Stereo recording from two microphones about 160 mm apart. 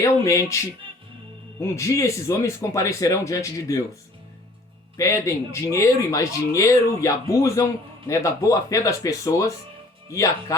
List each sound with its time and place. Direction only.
0.0 s speech: 20° left (ahead or behind)
1.6 s speech: 20° left (ahead or behind)
4.9 s speech: 20° left (ahead or behind)